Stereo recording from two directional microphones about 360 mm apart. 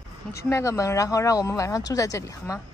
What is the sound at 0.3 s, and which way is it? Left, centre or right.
Speech, centre.